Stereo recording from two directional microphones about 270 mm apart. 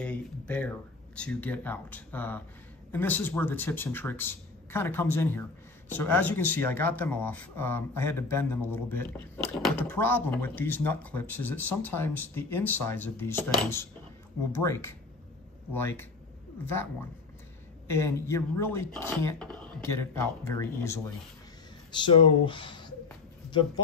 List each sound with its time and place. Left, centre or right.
0.0 s speech: centre